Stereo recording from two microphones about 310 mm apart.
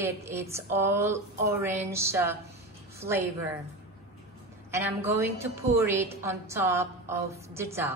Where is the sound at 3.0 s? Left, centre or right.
Right.